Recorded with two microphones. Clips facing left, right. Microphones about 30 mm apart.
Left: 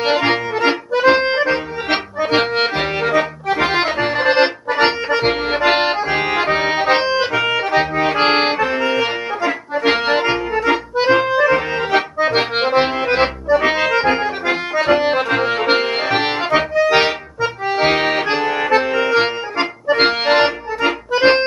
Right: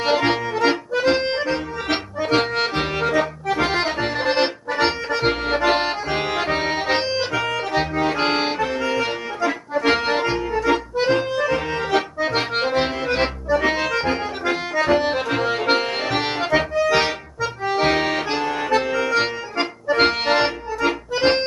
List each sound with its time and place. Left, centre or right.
0.0 s accordion: left